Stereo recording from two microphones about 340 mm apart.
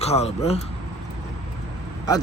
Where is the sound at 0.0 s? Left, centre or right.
Centre.